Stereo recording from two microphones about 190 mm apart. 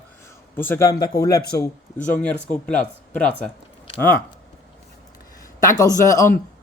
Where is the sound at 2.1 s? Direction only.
5° left (ahead or behind).